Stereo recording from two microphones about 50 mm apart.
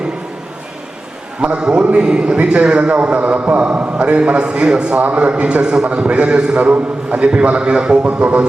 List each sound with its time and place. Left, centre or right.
1.4 s a man's voice: centre
3.2 s a man's voice: right
6.6 s a man's voice: right